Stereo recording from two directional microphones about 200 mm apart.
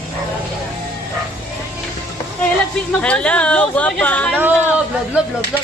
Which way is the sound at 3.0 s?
5° left (ahead or behind).